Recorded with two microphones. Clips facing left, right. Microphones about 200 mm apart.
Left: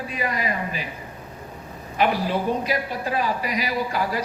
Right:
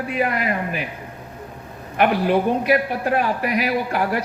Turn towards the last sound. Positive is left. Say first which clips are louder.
# right 4 dB
turn(degrees=-60)  # may be behind; listen again after turning